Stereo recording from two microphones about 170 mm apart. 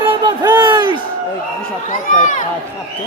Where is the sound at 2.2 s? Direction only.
50° left (ahead or behind).